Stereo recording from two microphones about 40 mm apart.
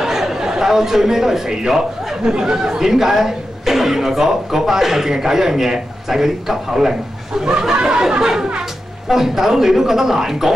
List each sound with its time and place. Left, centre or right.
0.0 s a man's voice: centre